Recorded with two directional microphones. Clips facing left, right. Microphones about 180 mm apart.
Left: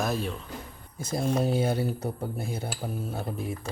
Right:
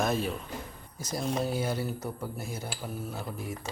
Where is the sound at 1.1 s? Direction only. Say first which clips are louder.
Left 4 dB; 25° left (ahead or behind).